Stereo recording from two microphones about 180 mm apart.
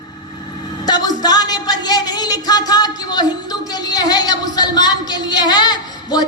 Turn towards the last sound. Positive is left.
turn(degrees=25)  # may be behind; listen again after turning